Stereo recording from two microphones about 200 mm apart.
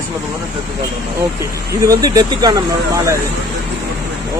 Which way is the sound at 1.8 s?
15° right (ahead or behind).